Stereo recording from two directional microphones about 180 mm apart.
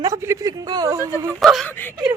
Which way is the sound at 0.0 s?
15° right (ahead or behind).